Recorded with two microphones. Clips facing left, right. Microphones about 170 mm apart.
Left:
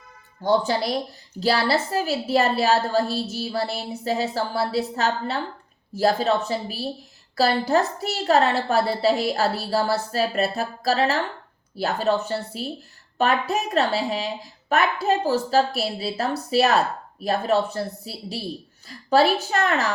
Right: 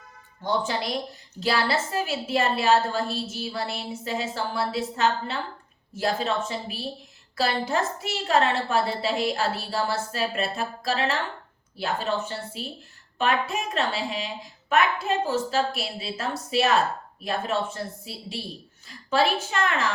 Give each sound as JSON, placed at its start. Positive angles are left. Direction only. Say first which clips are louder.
{"t": 0.4, "sound": "a woman's voice", "louder": "left 6 dB", "side_deg": 35}